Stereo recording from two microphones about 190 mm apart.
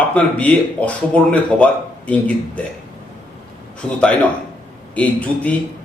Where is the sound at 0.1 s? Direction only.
5° left (ahead or behind).